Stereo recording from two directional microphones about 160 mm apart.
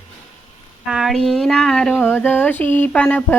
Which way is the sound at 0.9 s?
Centre (ahead or behind).